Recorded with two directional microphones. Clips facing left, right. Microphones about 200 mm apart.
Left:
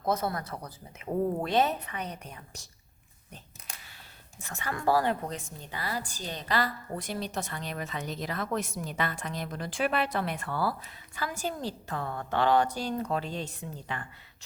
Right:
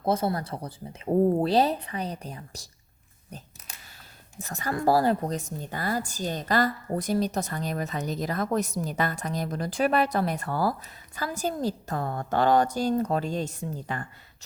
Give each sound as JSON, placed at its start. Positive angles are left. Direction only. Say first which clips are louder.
{"t": 0.0, "sound": "a woman's voice", "louder": "right 4 dB", "side_deg": -30}
{"t": 4.4, "sound": "a woman's voice", "louder": "right 6 dB", "side_deg": -40}